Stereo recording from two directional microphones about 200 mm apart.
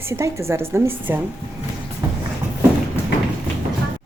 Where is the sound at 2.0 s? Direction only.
15° right (ahead or behind).